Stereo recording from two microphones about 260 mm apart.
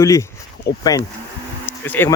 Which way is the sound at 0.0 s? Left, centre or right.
Centre.